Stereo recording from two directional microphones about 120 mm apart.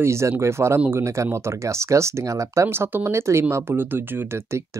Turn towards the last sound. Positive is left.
turn(degrees=-15)  # may be behind; listen again after turning